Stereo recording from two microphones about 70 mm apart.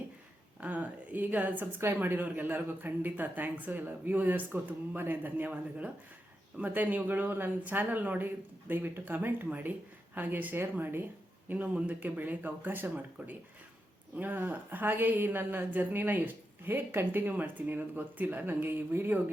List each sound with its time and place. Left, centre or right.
0.6 s a woman's voice: right
1.8 s a woman's voice: right